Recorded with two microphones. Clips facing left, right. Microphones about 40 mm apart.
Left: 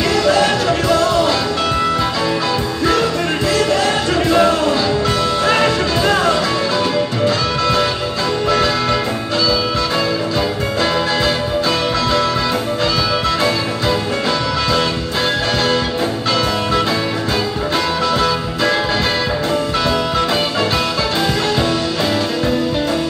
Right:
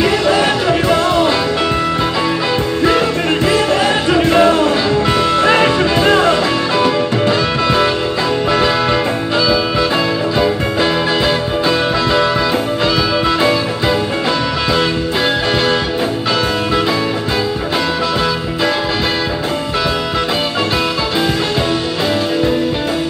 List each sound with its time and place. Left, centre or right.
0.0 s music: right
2.8 s music: right